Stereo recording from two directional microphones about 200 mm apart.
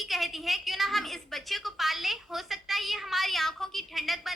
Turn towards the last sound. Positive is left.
turn(degrees=0)  # may be behind; listen again after turning